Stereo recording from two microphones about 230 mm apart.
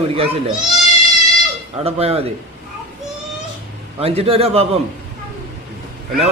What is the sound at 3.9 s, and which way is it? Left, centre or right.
Speech, right.